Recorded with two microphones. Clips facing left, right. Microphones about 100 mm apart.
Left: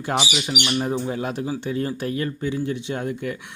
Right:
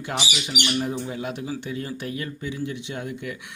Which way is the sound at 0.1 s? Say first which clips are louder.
Left 5 dB; 35° left (ahead or behind).